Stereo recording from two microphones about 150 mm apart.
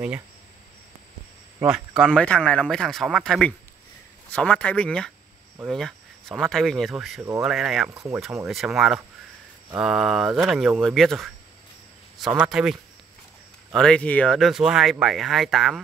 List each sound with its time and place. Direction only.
1.7 s speech: 5° left (ahead or behind)
7.9 s speech: 20° right (ahead or behind)
8.5 s speech: centre (ahead or behind)
12.4 s speech: 5° right (ahead or behind)
13.7 s speech: 5° left (ahead or behind)